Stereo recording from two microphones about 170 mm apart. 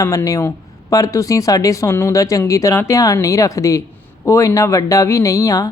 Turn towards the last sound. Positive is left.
turn(degrees=20)  # may be behind; listen again after turning